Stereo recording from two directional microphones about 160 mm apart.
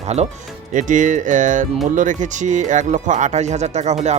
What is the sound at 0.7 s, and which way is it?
Speech, 50° right (ahead or behind).